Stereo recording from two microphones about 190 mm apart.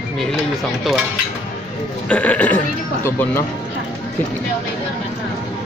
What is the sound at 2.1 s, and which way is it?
Speech, 5° left (ahead or behind).